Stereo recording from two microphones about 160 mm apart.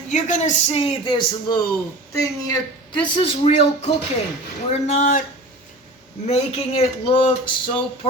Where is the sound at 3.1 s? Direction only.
35° left (ahead or behind); by 5.2 s 55° left (ahead or behind).